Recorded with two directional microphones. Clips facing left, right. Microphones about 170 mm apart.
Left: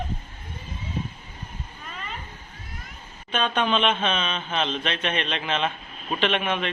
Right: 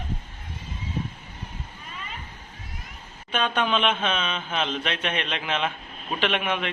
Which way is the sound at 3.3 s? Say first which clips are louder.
Left 1 dB; 10° right (ahead or behind).